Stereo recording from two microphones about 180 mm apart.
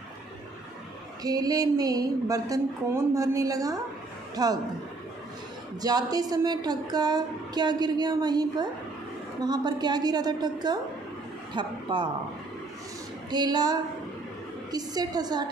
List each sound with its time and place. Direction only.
1.2 s a woman's voice: 20° right (ahead or behind)
5.8 s a woman's voice: 20° right (ahead or behind)
13.3 s a woman's voice: 25° right (ahead or behind)